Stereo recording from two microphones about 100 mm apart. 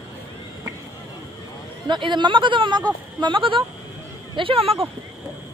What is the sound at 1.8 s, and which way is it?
Speech, 50° right (ahead or behind).